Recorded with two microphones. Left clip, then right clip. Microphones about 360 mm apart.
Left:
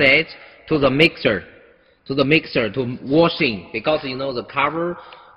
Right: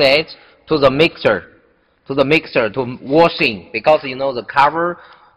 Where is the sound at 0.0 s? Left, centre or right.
Centre.